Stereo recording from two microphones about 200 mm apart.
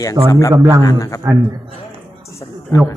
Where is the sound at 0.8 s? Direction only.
15° left (ahead or behind).